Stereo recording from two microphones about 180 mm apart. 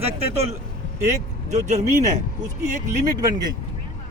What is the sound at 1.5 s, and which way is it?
Speech, 40° right (ahead or behind).